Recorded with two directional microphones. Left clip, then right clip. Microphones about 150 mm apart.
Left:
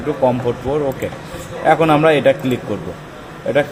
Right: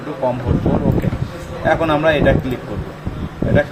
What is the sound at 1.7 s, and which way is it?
Speech, 75° left (ahead or behind).